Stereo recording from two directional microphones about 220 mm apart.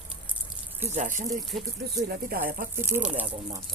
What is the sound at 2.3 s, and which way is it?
Speech, 40° right (ahead or behind).